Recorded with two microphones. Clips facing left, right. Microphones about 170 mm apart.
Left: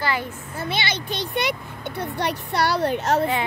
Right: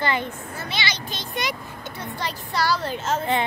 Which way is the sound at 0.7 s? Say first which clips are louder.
Left 3 dB; 60° left (ahead or behind).